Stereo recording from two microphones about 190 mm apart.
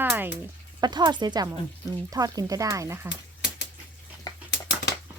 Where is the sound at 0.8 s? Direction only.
20° right (ahead or behind).